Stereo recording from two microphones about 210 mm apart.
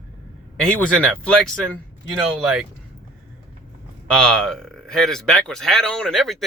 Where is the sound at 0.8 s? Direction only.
5° left (ahead or behind).